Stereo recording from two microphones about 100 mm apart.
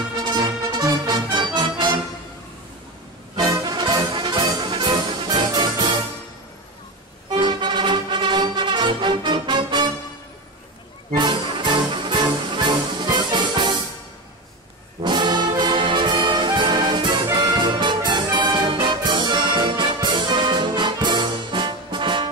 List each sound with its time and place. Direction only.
0.3 s music: 45° right (ahead or behind)
3.3 s music: 40° right (ahead or behind)
7.2 s music: 50° right (ahead or behind)
11.1 s music: 55° right (ahead or behind)
15.0 s brass instrument: 50° right (ahead or behind)